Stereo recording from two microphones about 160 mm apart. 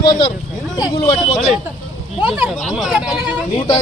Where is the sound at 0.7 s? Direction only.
25° left (ahead or behind).